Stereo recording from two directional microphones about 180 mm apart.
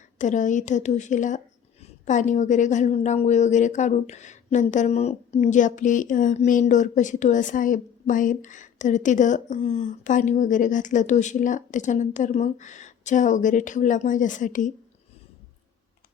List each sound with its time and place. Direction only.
0.2 s a woman's voice: 45° left (ahead or behind)